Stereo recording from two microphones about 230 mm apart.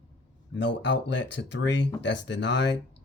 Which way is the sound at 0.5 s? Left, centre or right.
Left.